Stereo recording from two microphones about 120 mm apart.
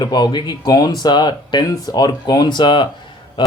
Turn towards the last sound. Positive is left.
turn(degrees=40)  # may be behind; listen again after turning